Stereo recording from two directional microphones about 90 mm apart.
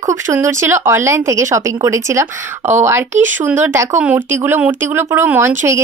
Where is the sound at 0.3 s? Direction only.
30° right (ahead or behind).